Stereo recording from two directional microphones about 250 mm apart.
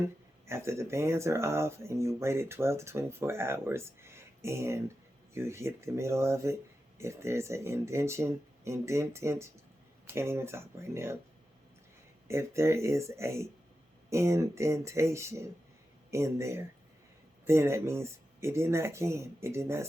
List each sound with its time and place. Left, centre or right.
0.4 s speech: centre
12.3 s speech: centre